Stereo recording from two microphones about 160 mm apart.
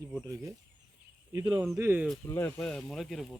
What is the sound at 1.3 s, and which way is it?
Speech, 25° right (ahead or behind).